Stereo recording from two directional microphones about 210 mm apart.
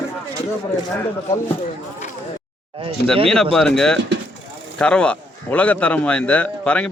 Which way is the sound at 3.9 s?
55° right (ahead or behind).